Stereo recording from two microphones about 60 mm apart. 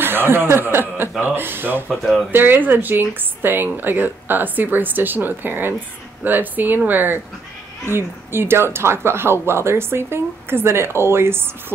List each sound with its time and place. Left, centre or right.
0.0 s speech: right